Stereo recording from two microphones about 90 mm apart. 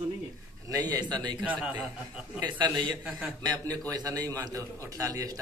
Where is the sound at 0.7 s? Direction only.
50° right (ahead or behind).